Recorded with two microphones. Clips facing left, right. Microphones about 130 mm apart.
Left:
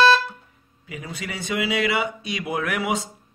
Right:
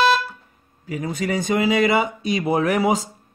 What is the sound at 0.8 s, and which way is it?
A man's voice, 45° right (ahead or behind).